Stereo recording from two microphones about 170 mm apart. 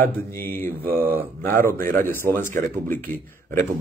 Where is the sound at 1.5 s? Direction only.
10° left (ahead or behind).